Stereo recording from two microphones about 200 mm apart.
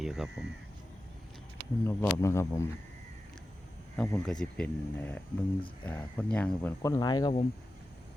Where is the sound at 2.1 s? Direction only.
15° left (ahead or behind).